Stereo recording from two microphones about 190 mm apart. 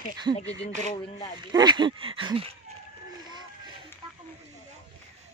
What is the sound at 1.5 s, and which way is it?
Speech, 25° right (ahead or behind).